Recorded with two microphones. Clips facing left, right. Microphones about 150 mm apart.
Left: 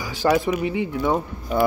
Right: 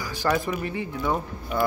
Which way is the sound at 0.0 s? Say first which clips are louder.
Left 5 dB; 20° left (ahead or behind).